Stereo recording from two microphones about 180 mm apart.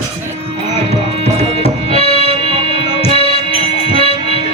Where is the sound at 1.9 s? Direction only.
30° left (ahead or behind).